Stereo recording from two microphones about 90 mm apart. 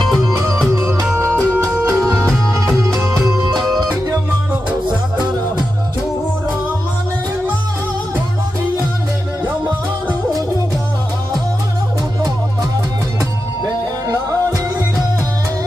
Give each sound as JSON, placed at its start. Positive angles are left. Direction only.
{"t": 0.2, "sound": "music", "side_deg": -35}
{"t": 2.1, "sound": "music", "side_deg": 10}
{"t": 14.0, "sound": "music", "side_deg": -45}